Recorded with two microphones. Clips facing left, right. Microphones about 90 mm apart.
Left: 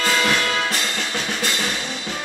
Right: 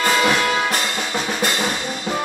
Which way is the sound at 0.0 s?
15° right (ahead or behind).